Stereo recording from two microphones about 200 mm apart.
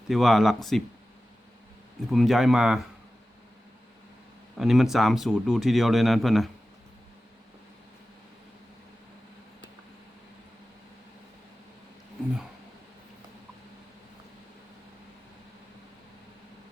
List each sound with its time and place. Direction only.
0.1 s speech: centre (ahead or behind)
2.0 s speech: centre (ahead or behind)
4.5 s speech: centre (ahead or behind)